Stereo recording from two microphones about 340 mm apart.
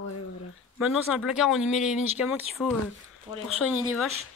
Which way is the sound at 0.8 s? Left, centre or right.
Centre.